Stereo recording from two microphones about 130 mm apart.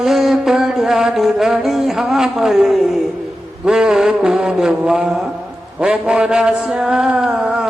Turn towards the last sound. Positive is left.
turn(degrees=-5)  # may be behind; listen again after turning